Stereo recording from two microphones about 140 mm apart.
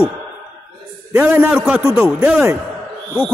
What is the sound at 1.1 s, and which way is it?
A man's voice, 15° right (ahead or behind).